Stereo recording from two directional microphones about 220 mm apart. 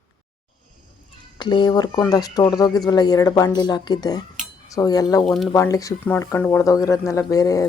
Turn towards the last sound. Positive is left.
turn(degrees=15)  # may be behind; listen again after turning